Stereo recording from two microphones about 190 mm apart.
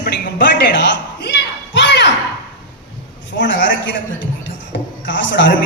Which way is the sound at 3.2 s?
70° left (ahead or behind).